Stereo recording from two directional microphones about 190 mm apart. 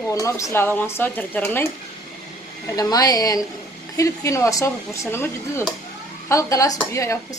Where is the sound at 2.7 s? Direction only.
20° left (ahead or behind).